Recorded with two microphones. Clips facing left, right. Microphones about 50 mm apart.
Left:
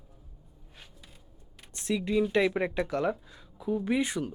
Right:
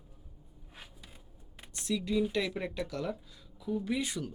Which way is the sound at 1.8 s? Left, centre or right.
Left.